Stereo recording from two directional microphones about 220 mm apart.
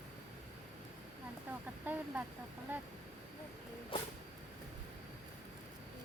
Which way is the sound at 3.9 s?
25° left (ahead or behind).